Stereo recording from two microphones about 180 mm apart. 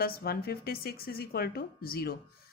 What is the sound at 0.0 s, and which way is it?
Speech, 60° left (ahead or behind).